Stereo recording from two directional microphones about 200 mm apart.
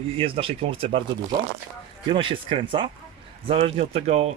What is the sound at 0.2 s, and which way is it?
Speech, 25° right (ahead or behind).